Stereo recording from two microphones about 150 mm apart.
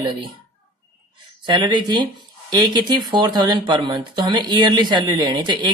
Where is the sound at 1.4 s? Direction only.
30° right (ahead or behind).